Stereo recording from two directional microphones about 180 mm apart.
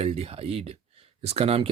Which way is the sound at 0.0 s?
35° right (ahead or behind).